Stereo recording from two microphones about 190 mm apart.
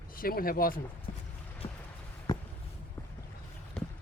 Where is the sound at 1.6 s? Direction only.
25° left (ahead or behind).